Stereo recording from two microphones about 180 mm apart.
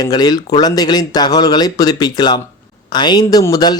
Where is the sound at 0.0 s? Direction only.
20° left (ahead or behind).